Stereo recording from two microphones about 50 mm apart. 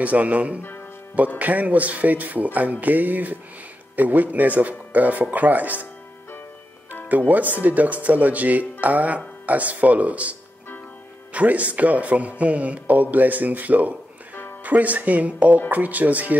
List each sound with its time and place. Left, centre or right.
0.0 s speech: right
0.6 s music: left
1.4 s speech: right
7.1 s speech: right
11.3 s speech: right